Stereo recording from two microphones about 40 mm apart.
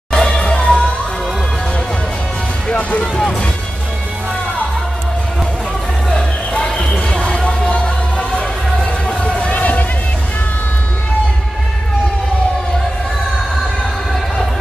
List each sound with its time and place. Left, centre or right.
0.1 s music: centre
2.7 s speech: left
6.8 s music: left
9.4 s a sound: left